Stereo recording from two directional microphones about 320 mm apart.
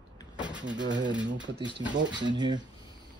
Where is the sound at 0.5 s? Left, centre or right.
Right.